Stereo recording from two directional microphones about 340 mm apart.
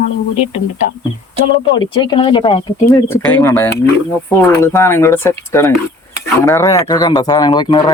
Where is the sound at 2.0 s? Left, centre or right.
Centre.